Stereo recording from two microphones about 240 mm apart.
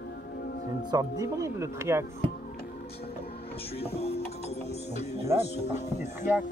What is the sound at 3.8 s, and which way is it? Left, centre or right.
Speech, left.